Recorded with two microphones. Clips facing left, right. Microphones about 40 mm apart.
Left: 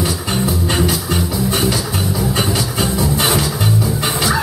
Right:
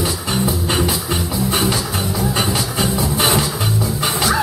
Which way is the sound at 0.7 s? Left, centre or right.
Centre.